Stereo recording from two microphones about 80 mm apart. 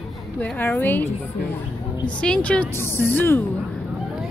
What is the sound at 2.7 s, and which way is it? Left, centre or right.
Speech, left.